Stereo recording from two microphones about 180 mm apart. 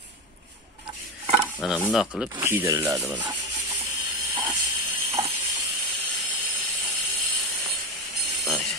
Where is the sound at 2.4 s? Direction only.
15° right (ahead or behind).